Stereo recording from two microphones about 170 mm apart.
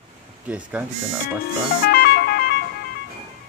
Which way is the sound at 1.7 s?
60° left (ahead or behind).